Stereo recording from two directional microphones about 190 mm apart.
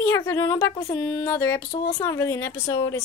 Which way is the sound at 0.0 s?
15° left (ahead or behind).